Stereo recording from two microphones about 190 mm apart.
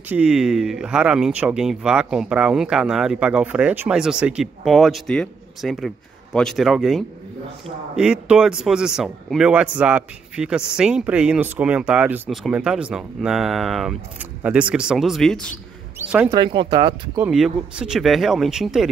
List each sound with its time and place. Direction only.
0.1 s speech: 5° right (ahead or behind)
16.0 s speech: 10° right (ahead or behind)
16.3 s speech: 25° right (ahead or behind)
17.2 s speech: 5° right (ahead or behind)